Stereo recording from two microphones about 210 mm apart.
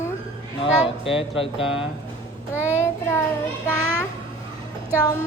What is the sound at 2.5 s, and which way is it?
Child singing, 10° left (ahead or behind).